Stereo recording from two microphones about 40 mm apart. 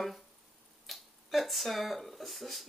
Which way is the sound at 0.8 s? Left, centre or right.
Centre.